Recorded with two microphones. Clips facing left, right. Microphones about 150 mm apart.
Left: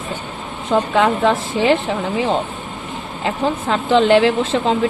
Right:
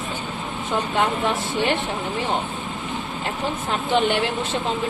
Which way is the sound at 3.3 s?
90° left.